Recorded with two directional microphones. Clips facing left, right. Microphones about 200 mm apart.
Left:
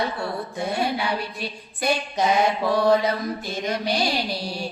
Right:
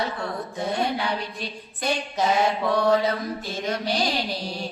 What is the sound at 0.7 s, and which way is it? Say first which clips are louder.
Mantra: even; 10° left (ahead or behind).